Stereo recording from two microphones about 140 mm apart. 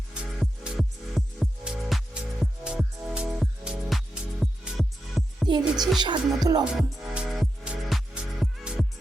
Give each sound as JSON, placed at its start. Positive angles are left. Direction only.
{"t": 0.1, "sound": "music", "side_deg": -5}
{"t": 5.5, "sound": "music", "side_deg": -30}
{"t": 6.7, "sound": "music", "side_deg": 0}